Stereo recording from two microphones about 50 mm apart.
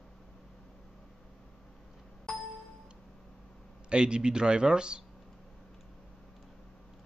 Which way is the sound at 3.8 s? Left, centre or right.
Centre.